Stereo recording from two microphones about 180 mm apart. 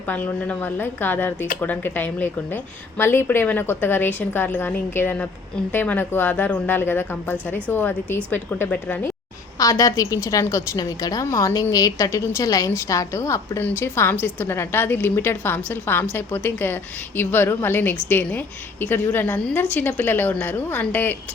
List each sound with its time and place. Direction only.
0.1 s a woman's voice: 10° left (ahead or behind)